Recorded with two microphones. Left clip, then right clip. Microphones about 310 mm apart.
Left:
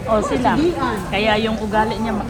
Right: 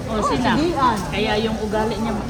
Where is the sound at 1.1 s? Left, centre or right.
Centre.